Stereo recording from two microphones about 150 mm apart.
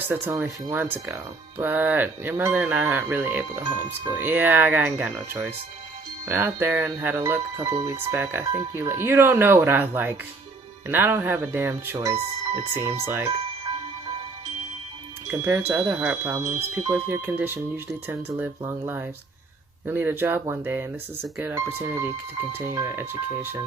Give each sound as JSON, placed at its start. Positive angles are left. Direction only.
{"t": 0.1, "sound": "speech", "side_deg": -15}
{"t": 15.3, "sound": "speech", "side_deg": -15}
{"t": 16.4, "sound": "speech", "side_deg": -45}
{"t": 16.9, "sound": "speech", "side_deg": -15}